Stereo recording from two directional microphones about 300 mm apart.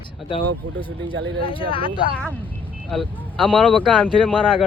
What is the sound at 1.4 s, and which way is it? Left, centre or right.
Speech, centre.